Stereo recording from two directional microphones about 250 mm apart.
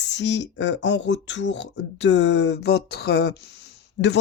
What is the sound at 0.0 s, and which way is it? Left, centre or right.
Speech, left.